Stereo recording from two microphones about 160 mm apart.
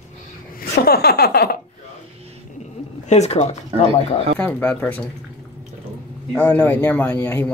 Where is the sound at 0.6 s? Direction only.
75° left (ahead or behind).